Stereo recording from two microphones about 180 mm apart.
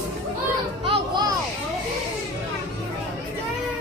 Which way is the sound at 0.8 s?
30° right (ahead or behind).